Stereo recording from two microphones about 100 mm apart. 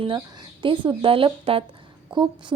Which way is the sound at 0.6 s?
55° right (ahead or behind).